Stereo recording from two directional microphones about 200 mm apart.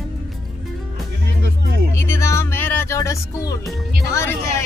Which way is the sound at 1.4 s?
55° right (ahead or behind).